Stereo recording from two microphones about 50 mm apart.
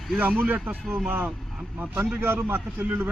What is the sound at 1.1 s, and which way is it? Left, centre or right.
Speech, right.